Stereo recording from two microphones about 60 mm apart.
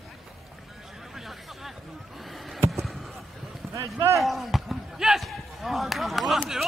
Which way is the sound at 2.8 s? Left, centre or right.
Centre.